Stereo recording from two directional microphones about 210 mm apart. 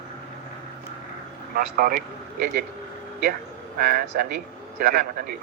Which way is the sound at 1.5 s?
45° right (ahead or behind).